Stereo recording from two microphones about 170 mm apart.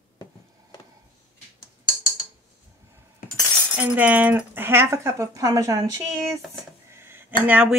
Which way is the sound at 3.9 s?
10° right (ahead or behind).